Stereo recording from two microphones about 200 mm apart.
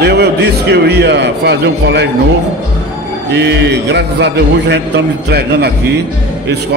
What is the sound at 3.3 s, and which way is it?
A man's voice, 55° right (ahead or behind).